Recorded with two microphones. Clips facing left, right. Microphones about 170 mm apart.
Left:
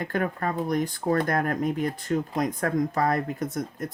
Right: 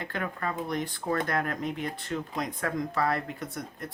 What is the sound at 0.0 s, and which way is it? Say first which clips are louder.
Speech: left 6 dB; 45° left (ahead or behind).